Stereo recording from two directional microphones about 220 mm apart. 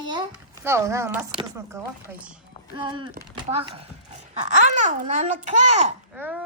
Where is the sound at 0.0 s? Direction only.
20° right (ahead or behind).